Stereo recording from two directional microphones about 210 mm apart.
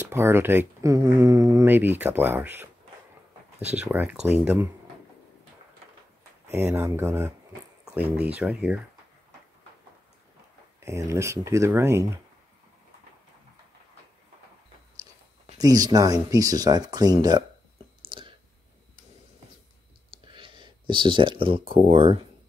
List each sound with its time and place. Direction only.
0.1 s speech: 10° right (ahead or behind)
3.7 s speech: 10° right (ahead or behind)
6.4 s speech: 10° right (ahead or behind)
10.9 s speech: 15° right (ahead or behind)
15.5 s speech: 15° right (ahead or behind)
18.0 s a sound: 25° right (ahead or behind)
20.2 s speech: 25° right (ahead or behind)